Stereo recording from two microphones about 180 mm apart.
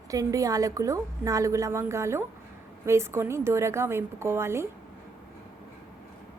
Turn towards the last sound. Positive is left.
turn(degrees=-15)  # may be behind; listen again after turning